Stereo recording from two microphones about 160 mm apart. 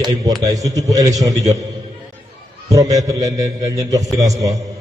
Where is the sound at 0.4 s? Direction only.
20° right (ahead or behind).